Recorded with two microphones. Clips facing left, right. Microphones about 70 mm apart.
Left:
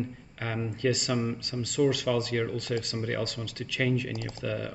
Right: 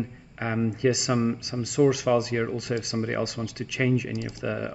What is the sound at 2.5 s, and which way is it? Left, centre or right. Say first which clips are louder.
Speech: right 3 dB; centre.